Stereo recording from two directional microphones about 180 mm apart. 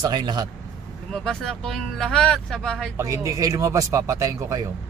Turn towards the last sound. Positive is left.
turn(degrees=-15)  # may be behind; listen again after turning